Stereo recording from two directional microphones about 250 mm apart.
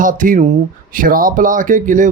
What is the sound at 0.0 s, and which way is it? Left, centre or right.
Speech, right.